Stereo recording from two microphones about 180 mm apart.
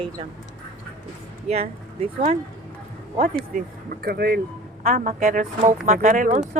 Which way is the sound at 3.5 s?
55° right (ahead or behind).